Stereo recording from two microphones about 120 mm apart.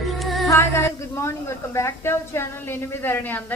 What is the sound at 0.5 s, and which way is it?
A woman's voice, 25° left (ahead or behind).